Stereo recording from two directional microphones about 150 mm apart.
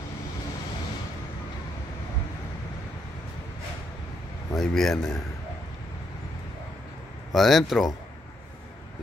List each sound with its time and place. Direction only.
4.6 s speech: 5° left (ahead or behind)
7.3 s speech: centre (ahead or behind)